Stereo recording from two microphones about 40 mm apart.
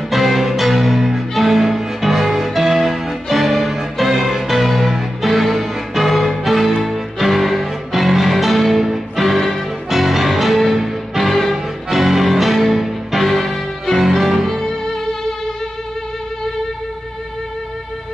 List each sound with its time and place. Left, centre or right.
0.1 s music: centre